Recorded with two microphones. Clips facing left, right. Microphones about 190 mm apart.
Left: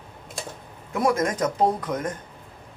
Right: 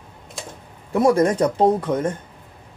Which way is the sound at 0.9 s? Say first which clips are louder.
Right 6 dB; 30° right (ahead or behind).